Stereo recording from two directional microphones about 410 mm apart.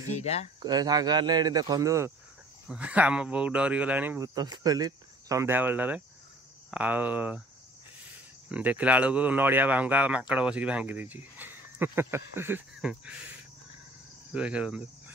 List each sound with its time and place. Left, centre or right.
0.1 s speech: centre
0.6 s speech: centre
8.5 s speech: centre
14.3 s speech: centre